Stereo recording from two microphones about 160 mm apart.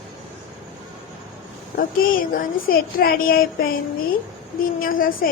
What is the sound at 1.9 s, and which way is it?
A woman's voice, 65° left (ahead or behind).